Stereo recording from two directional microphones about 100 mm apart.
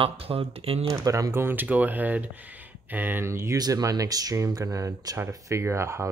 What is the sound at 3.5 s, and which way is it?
Speech, 40° right (ahead or behind).